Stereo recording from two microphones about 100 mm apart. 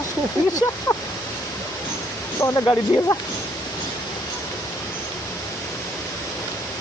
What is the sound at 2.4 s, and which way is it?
Speech, 30° left (ahead or behind).